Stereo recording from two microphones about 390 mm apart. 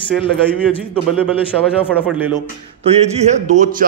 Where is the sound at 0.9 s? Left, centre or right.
Centre.